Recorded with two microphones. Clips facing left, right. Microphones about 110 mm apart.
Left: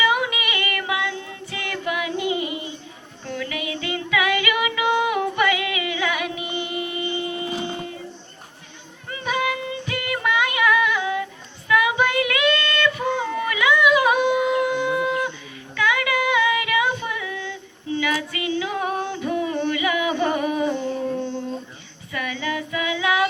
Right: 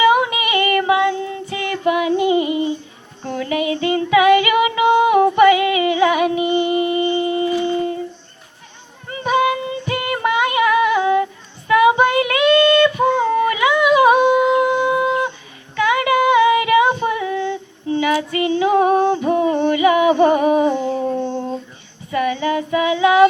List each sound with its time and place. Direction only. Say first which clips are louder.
0.0 s child singing: right 7 dB; 35° right (ahead or behind)
3.2 s female singing: right 8 dB; 35° right (ahead or behind)
9.0 s female singing: right 7 dB; 35° right (ahead or behind)
14.6 s a sound: right 5 dB; 45° right (ahead or behind)
14.8 s a sound: right 5 dB; 30° right (ahead or behind)
15.7 s female singing: right 6 dB; 35° right (ahead or behind)
19.6 s a sound: right 9 dB; 35° right (ahead or behind)
20.7 s humming: right 5 dB; 45° right (ahead or behind)
22.1 s child singing: right 9 dB; 35° right (ahead or behind)